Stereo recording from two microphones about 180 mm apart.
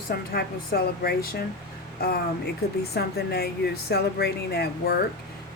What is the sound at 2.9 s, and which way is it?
A woman's voice, 60° left (ahead or behind).